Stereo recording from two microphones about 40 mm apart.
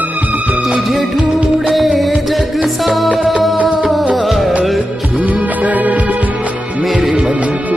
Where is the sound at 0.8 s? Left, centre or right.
Centre.